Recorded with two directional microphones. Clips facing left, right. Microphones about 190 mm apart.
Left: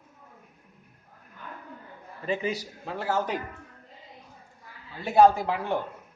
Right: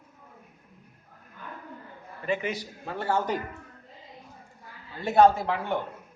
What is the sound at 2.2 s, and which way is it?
Speech, 35° left (ahead or behind).